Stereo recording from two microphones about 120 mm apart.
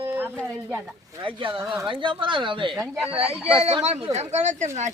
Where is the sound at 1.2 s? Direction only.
45° right (ahead or behind).